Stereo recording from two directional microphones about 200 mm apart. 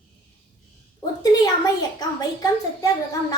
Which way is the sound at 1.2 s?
20° left (ahead or behind).